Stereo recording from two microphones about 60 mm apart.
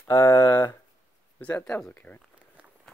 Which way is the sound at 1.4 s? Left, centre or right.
Left.